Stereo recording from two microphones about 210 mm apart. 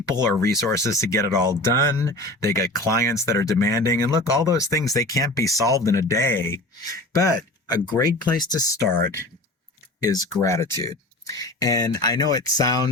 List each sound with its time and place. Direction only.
0.3 s speech: 15° left (ahead or behind)